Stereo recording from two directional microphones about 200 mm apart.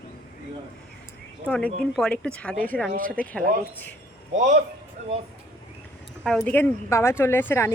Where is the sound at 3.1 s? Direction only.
5° left (ahead or behind).